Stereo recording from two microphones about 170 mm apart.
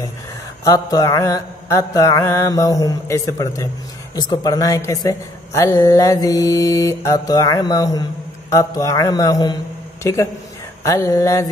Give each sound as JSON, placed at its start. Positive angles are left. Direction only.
{"t": 0.7, "sound": "speech", "side_deg": 20}
{"t": 10.8, "sound": "mantra", "side_deg": 20}